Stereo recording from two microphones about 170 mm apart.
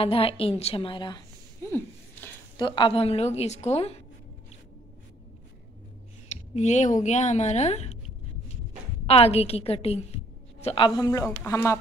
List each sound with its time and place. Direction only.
0.0 s a woman's voice: 35° left (ahead or behind)
1.7 s a sound: 10° left (ahead or behind)
2.5 s a woman's voice: 30° left (ahead or behind)
6.5 s a woman's voice: 45° left (ahead or behind)
9.0 s a woman's voice: 35° left (ahead or behind)
11.0 s speech: 20° left (ahead or behind)